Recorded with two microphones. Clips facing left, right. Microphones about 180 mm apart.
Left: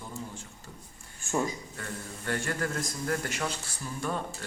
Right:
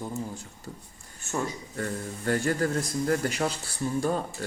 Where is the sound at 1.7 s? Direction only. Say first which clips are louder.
Right 7 dB; 40° right (ahead or behind).